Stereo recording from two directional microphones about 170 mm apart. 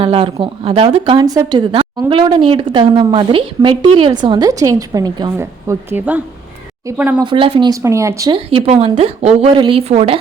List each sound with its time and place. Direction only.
0.0 s speech: 35° right (ahead or behind); by 7.2 s 5° right (ahead or behind)
7.2 s speech: 30° right (ahead or behind)
7.7 s speech: 15° right (ahead or behind)
8.4 s a woman's voice: 35° right (ahead or behind)